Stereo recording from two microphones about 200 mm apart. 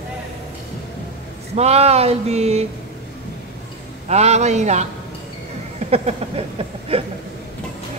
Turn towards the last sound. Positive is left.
turn(degrees=-30)  # may be behind; listen again after turning